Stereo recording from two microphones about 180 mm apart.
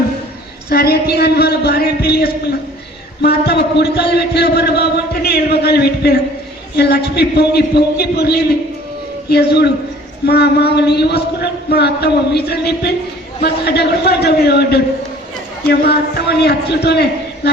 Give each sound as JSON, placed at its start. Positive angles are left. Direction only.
{"t": 0.7, "sound": "a man's voice", "side_deg": 60}